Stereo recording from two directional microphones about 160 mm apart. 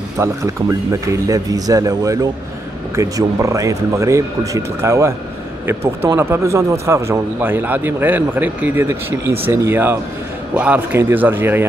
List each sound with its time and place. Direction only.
0.2 s speech: 20° right (ahead or behind)
6.1 s a man's voice: 15° right (ahead or behind)